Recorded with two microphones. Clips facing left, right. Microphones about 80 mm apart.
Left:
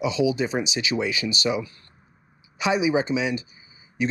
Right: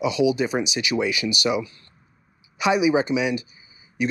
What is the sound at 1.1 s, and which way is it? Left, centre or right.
Speech, left.